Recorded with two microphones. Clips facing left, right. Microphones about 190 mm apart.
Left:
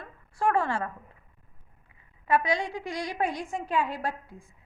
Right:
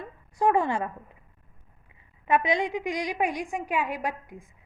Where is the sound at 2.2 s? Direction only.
20° right (ahead or behind).